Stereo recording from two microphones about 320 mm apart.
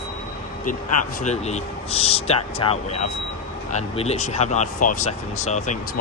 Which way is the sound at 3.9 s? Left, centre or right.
Centre.